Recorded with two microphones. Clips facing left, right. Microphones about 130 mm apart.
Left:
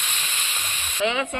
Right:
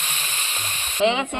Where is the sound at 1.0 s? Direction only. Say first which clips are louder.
Right 4 dB; 25° right (ahead or behind).